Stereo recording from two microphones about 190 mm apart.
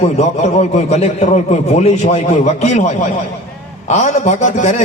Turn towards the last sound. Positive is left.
turn(degrees=40)  # may be behind; listen again after turning